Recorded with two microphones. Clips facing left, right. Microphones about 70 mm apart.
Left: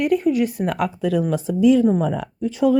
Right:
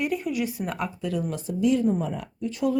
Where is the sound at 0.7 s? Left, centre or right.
Left.